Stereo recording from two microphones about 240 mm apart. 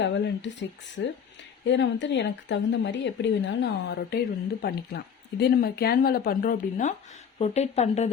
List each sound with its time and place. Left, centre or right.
0.0 s speech: left